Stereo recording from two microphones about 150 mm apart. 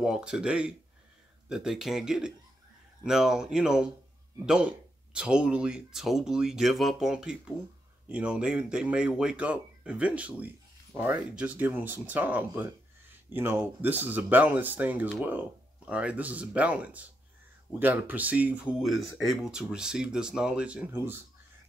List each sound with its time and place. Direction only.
0.0 s speech: 5° right (ahead or behind)
5.1 s speech: 5° right (ahead or behind)